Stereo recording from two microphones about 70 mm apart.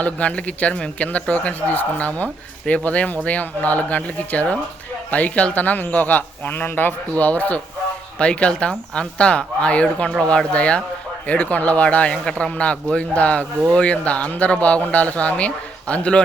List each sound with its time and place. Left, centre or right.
0.0 s a man's voice: centre